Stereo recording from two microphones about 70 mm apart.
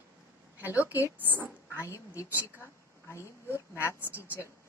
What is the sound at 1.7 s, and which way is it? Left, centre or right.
A woman's voice, left.